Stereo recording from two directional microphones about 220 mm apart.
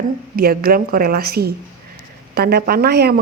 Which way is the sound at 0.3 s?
45° right (ahead or behind).